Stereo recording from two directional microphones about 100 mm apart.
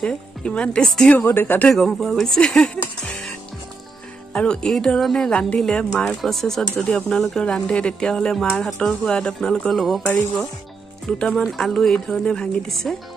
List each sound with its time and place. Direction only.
0.0 s speech: 10° left (ahead or behind)
1.1 s speech: 20° left (ahead or behind)
1.7 s speech: 5° left (ahead or behind)
10.0 s speech: 20° left (ahead or behind)
11.1 s speech: 10° left (ahead or behind)